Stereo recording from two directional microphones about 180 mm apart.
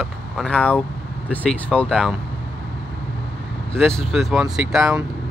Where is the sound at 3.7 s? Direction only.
5° left (ahead or behind).